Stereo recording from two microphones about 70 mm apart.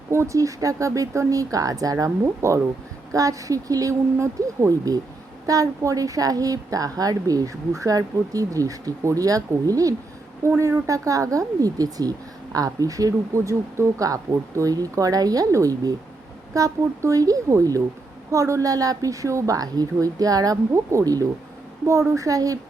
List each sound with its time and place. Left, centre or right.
0.1 s speech: right
2.2 s a woman's voice: right